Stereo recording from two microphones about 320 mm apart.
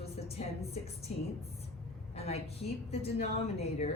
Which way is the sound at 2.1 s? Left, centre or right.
Centre.